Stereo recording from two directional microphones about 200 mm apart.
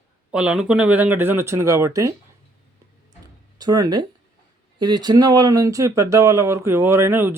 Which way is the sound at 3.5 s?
20° right (ahead or behind).